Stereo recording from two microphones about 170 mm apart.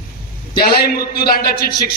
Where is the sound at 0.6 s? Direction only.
65° left (ahead or behind).